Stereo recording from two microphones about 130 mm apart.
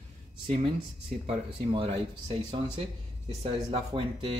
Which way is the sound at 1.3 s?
45° right (ahead or behind).